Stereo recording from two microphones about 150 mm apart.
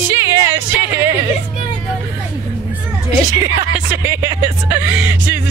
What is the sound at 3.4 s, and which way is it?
Speech, 15° right (ahead or behind).